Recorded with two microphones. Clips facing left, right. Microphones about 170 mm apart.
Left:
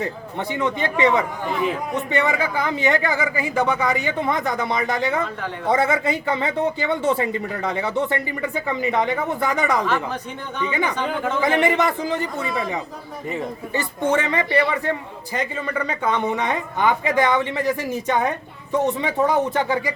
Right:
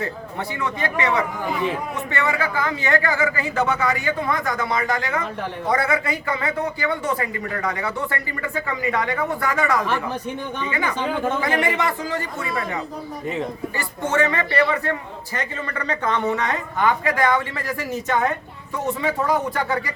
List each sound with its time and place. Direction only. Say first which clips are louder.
0.0 s speech: left 1 dB; 20° left (ahead or behind)
10.9 s speech: right 1 dB; 10° right (ahead or behind)
11.6 s speech: left 3 dB; 20° left (ahead or behind)
13.7 s a man's voice: left 2 dB; 15° left (ahead or behind)